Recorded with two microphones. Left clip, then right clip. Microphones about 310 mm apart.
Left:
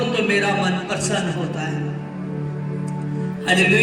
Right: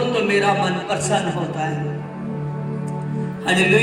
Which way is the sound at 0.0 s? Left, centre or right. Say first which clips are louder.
Right 1 dB; right.